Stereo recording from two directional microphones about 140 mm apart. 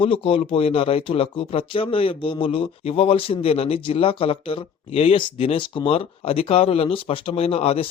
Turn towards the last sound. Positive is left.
turn(degrees=45)  # may be behind; listen again after turning